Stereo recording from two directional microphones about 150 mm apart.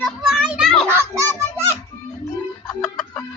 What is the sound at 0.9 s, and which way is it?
Music, 15° right (ahead or behind).